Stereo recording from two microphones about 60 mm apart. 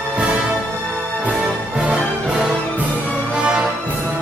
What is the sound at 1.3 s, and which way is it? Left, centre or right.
Music, centre.